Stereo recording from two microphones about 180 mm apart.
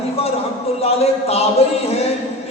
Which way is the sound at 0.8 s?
35° left (ahead or behind).